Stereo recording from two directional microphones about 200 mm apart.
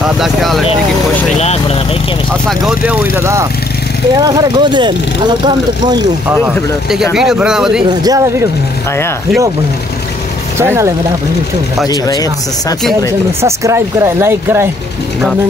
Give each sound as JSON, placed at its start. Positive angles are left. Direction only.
{"t": 0.0, "sound": "speech", "side_deg": 0}
{"t": 2.6, "sound": "speech", "side_deg": -10}
{"t": 7.9, "sound": "speech", "side_deg": -20}
{"t": 10.6, "sound": "speech", "side_deg": -10}
{"t": 11.9, "sound": "speech", "side_deg": 20}
{"t": 13.4, "sound": "speech", "side_deg": -15}